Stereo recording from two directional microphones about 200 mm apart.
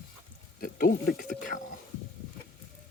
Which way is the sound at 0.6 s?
45° left (ahead or behind).